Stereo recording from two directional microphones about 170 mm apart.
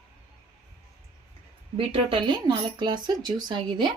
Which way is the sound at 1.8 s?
30° right (ahead or behind).